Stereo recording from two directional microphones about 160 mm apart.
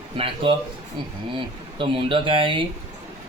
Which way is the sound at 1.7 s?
30° right (ahead or behind).